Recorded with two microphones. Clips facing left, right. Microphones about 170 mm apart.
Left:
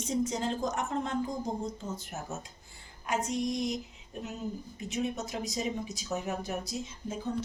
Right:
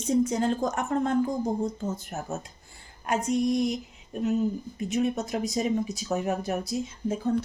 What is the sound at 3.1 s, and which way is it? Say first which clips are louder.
Speech: right 6 dB; 55° right (ahead or behind).